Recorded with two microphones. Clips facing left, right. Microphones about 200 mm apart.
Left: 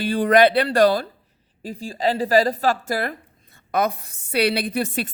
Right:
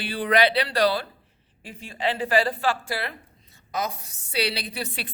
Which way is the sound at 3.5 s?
60° left (ahead or behind).